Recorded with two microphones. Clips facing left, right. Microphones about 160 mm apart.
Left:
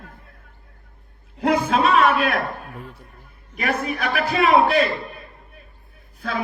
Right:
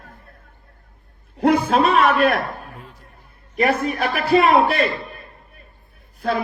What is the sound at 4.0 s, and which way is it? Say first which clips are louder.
Speech: right 5 dB; 40° right (ahead or behind).